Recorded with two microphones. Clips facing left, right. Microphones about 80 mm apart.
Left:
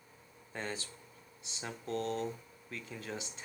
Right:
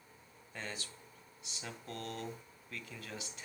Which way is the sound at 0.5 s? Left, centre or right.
Left.